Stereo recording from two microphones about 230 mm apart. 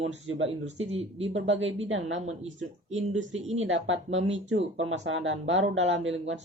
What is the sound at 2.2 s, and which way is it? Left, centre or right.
Speech, right.